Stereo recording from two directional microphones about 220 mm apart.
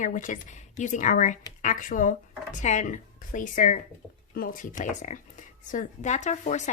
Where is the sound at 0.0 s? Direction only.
35° left (ahead or behind).